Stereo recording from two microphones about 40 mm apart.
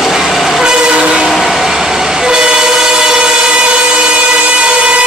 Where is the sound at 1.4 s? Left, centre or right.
Centre; by 4.1 s right.